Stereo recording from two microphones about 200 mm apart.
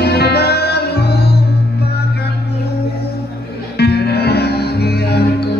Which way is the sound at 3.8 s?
55° left (ahead or behind).